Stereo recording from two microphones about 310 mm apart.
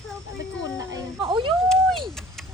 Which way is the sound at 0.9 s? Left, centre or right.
Centre.